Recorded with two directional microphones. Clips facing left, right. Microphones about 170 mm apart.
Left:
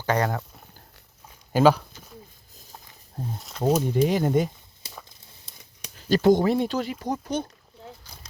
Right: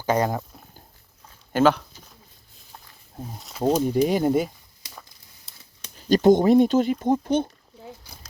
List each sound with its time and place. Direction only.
0.0 s speech: 15° right (ahead or behind)
1.5 s speech: 10° left (ahead or behind)
3.2 s speech: centre (ahead or behind)
6.1 s speech: 20° right (ahead or behind)
7.9 s splash: 10° right (ahead or behind)